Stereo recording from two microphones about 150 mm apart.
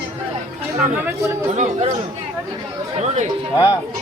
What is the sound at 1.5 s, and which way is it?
Speech, 50° right (ahead or behind).